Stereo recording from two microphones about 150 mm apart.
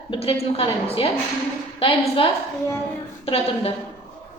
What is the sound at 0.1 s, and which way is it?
A woman's voice, 40° left (ahead or behind).